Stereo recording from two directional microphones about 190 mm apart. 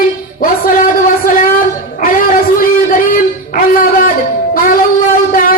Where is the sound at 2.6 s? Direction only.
45° left (ahead or behind).